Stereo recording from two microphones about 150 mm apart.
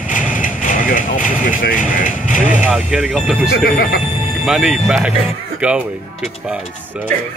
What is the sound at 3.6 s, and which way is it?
Speech, 75° left (ahead or behind).